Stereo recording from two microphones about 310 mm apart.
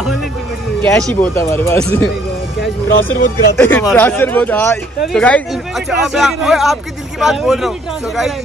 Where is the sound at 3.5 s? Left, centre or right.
Centre.